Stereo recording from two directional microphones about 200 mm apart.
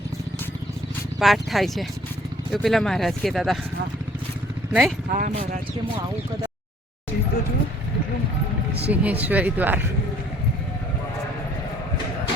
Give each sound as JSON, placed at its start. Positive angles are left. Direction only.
{"t": 1.2, "sound": "speech", "side_deg": 0}
{"t": 4.7, "sound": "speech", "side_deg": 0}
{"t": 5.1, "sound": "speech", "side_deg": -40}
{"t": 8.9, "sound": "speech", "side_deg": -10}